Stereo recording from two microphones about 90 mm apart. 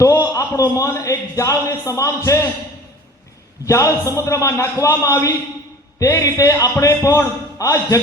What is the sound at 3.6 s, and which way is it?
A man's voice, 35° left (ahead or behind).